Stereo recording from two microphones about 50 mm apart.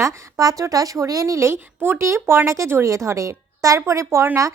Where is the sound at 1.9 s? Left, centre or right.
Right.